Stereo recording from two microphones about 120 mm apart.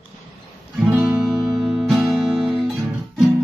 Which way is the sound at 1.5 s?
Centre (ahead or behind).